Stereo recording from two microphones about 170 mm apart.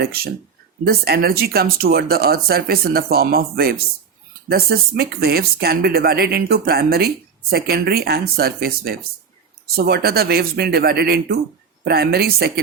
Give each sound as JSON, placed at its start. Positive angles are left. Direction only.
{"t": 0.0, "sound": "speech", "side_deg": -65}